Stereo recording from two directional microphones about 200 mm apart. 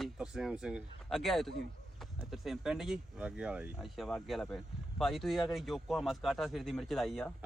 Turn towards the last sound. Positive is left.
turn(degrees=0)  # may be behind; listen again after turning